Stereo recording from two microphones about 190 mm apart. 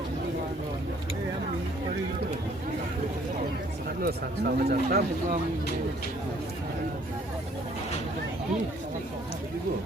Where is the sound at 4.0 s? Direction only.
50° right (ahead or behind).